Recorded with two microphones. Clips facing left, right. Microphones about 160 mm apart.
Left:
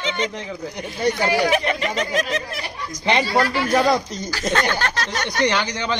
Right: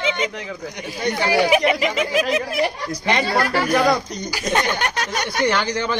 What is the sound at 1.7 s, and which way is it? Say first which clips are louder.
Speech: right 3 dB; 10° right (ahead or behind).